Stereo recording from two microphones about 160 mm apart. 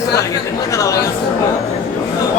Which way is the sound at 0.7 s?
20° left (ahead or behind).